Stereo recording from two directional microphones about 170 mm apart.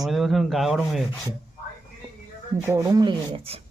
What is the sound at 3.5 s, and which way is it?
Speech, 35° right (ahead or behind).